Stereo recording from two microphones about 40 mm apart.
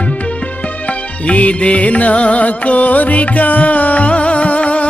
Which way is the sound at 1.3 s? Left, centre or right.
Left.